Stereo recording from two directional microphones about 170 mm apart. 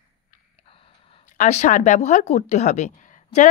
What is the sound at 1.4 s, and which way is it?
Speech, 45° left (ahead or behind).